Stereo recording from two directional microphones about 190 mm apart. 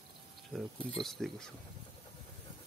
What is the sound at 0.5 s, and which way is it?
Speech, 5° left (ahead or behind).